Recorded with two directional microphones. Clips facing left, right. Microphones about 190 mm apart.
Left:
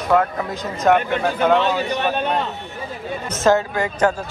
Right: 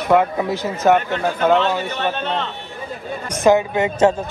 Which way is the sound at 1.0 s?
10° left (ahead or behind).